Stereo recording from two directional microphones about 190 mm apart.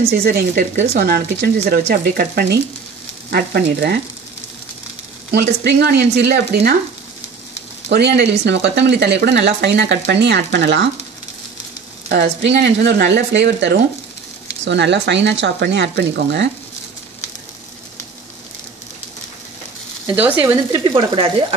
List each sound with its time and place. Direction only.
0.1 s speech: 55° right (ahead or behind)
5.3 s speech: 60° right (ahead or behind)
7.9 s speech: 60° right (ahead or behind)
12.1 s speech: 65° right (ahead or behind)
20.2 s speech: 10° right (ahead or behind)
20.8 s speech: 25° right (ahead or behind)